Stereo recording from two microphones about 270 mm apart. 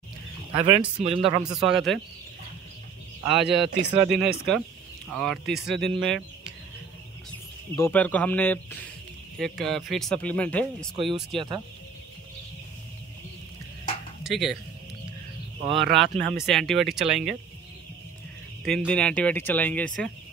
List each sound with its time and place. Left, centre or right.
0.6 s speech: right
1.4 s speech: centre
3.4 s speech: right
4.2 s speech: centre
7.7 s speech: centre
11.0 s speech: centre
14.2 s speech: centre
15.7 s speech: centre
18.6 s speech: centre